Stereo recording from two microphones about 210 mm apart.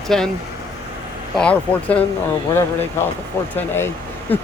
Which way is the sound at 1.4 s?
5° left (ahead or behind).